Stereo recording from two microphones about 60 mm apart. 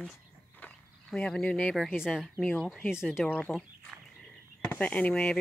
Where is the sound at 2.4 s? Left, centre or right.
Centre.